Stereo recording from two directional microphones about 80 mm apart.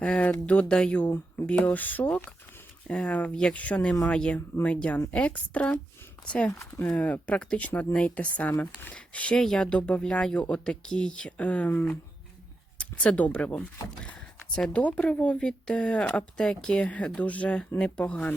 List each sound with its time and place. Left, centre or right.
0.0 s speech: centre
6.5 s speech: left
6.8 s speech: centre